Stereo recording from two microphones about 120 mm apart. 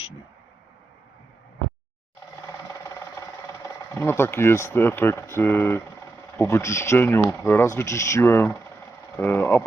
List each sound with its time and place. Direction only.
3.9 s speech: 20° left (ahead or behind)